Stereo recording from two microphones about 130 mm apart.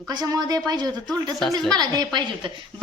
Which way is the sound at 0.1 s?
30° right (ahead or behind).